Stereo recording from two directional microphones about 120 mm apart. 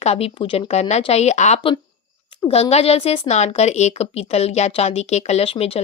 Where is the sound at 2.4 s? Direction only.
55° left (ahead or behind).